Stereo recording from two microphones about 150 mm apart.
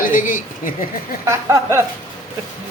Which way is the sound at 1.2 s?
20° right (ahead or behind).